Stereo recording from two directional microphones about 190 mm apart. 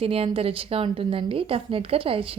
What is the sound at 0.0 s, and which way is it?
A woman's voice, 30° right (ahead or behind).